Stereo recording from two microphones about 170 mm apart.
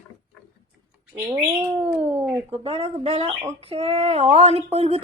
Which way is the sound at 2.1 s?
10° right (ahead or behind).